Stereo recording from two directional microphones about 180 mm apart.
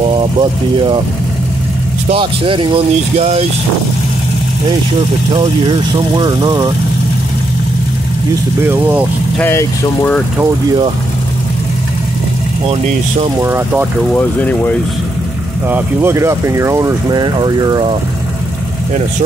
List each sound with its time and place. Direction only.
0.0 s speech: 30° right (ahead or behind)
2.0 s speech: 30° right (ahead or behind)
5.3 s speech: 25° right (ahead or behind)
8.6 s speech: 10° right (ahead or behind)
9.4 s speech: 10° left (ahead or behind)
12.6 s speech: 30° right (ahead or behind)
13.4 s speech: 15° right (ahead or behind)
14.1 s speech: 10° left (ahead or behind)
15.7 s speech: 15° right (ahead or behind)